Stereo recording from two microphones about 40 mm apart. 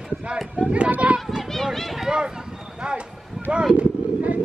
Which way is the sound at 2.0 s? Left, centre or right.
Centre.